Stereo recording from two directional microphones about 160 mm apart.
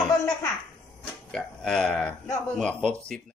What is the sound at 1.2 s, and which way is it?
Speech, 5° left (ahead or behind).